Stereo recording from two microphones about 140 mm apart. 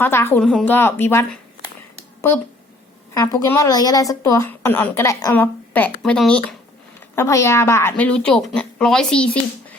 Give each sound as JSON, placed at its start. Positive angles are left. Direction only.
{"t": 0.0, "sound": "a woman's voice", "side_deg": 15}
{"t": 3.2, "sound": "a woman's voice", "side_deg": 20}
{"t": 7.2, "sound": "a woman's voice", "side_deg": 20}